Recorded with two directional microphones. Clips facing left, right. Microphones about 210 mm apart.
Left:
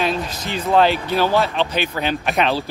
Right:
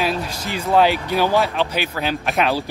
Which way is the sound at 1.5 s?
5° right (ahead or behind).